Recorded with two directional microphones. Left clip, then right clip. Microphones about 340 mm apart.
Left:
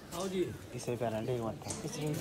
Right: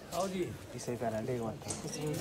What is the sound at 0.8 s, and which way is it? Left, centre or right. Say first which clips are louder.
Speech: left 1 dB; centre.